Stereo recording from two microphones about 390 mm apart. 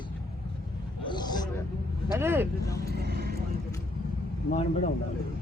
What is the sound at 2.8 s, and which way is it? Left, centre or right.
Vehicle, right.